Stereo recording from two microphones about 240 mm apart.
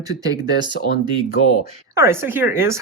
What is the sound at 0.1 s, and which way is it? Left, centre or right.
Speech, centre.